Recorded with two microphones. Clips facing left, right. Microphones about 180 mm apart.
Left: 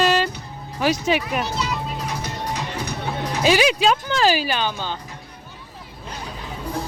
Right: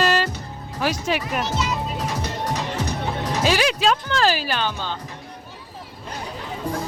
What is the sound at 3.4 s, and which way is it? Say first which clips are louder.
Speech: left 3 dB; 5° left (ahead or behind).